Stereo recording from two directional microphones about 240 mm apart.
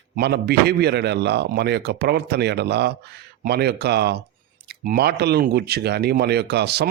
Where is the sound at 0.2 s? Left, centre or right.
Right.